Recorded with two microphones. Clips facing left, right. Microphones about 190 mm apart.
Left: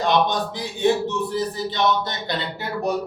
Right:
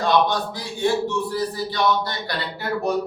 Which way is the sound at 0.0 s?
20° left (ahead or behind).